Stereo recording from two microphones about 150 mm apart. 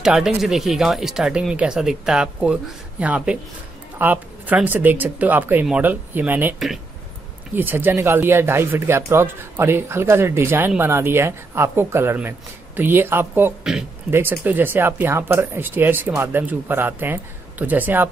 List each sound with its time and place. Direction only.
0.0 s speech: 5° right (ahead or behind)
7.5 s speech: 15° right (ahead or behind)